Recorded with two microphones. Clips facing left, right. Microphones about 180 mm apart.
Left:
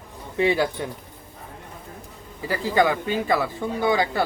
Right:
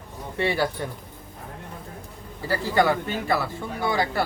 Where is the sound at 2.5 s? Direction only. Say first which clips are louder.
Left 1 dB; 15° left (ahead or behind).